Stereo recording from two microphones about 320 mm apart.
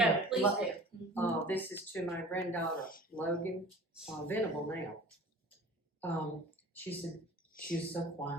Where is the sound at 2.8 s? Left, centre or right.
Left.